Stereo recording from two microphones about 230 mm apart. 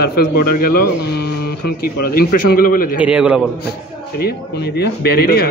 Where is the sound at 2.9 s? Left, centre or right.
Centre.